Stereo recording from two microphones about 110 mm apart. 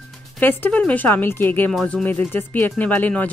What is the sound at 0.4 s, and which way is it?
Speech, 20° left (ahead or behind).